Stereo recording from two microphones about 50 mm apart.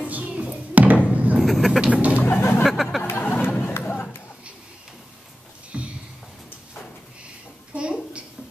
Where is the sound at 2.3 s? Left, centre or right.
Left.